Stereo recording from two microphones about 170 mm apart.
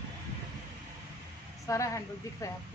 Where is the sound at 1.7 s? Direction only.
20° left (ahead or behind).